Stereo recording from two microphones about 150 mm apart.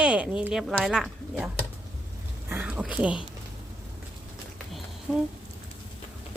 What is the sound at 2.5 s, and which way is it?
Speech, 10° right (ahead or behind).